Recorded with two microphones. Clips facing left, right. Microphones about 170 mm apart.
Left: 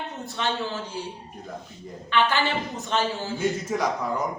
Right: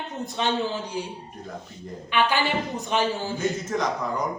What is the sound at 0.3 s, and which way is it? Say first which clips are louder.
Speech: right 3 dB; 15° right (ahead or behind).